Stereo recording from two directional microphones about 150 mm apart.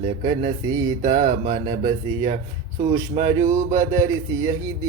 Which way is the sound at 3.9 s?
20° right (ahead or behind).